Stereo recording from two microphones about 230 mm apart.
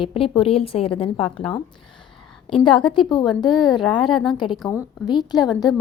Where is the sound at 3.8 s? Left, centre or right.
Centre.